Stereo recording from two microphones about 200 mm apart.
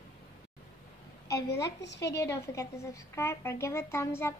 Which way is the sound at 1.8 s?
60° left (ahead or behind).